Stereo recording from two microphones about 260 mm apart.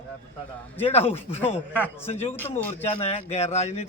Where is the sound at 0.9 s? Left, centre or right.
Left.